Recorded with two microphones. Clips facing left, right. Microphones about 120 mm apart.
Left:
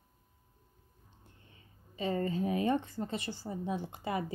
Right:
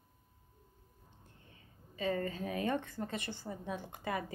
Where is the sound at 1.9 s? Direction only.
30° left (ahead or behind).